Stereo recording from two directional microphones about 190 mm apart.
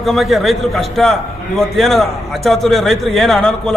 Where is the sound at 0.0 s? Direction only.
Centre (ahead or behind).